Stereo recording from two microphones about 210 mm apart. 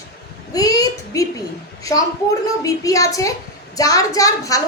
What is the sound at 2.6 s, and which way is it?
A woman's voice, 15° left (ahead or behind).